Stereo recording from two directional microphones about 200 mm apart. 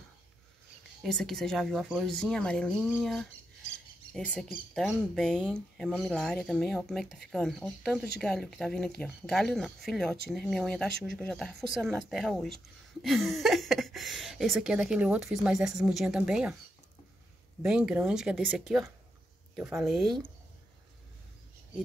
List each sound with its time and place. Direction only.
1.0 s speech: centre (ahead or behind)
17.6 s speech: 5° right (ahead or behind)